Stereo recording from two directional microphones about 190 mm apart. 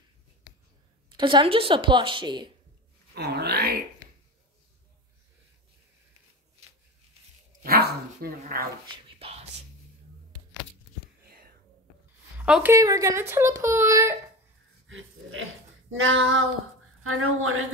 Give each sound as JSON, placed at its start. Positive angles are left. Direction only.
{"t": 1.1, "sound": "a woman's voice", "side_deg": -25}
{"t": 3.2, "sound": "groan", "side_deg": -60}
{"t": 7.6, "sound": "dog", "side_deg": -55}
{"t": 8.9, "sound": "a sound", "side_deg": -30}
{"t": 12.4, "sound": "a woman's voice", "side_deg": -5}
{"t": 12.7, "sound": "speech", "side_deg": -15}
{"t": 14.9, "sound": "pig", "side_deg": -90}
{"t": 15.9, "sound": "speech", "side_deg": -90}